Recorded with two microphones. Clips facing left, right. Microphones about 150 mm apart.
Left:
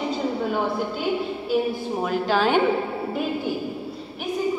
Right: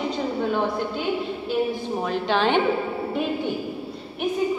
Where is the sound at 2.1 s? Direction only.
5° left (ahead or behind).